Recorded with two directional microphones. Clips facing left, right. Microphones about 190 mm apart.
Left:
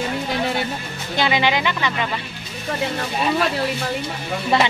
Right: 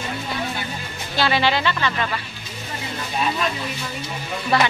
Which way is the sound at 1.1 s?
15° left (ahead or behind).